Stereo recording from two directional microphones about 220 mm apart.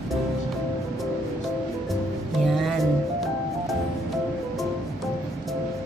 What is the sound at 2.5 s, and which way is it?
Music, centre (ahead or behind).